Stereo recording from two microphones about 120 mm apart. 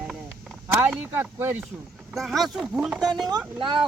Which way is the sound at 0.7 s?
20° right (ahead or behind).